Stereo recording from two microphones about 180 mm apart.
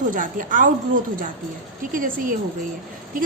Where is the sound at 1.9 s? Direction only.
50° right (ahead or behind).